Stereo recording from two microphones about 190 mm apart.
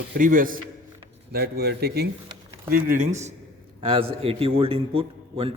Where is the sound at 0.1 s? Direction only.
45° right (ahead or behind).